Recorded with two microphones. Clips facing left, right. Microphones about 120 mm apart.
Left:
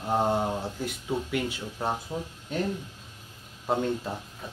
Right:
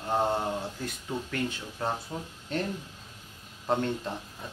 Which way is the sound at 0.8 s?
10° left (ahead or behind).